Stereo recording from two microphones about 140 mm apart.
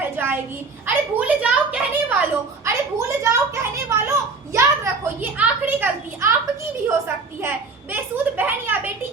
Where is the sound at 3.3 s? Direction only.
20° right (ahead or behind).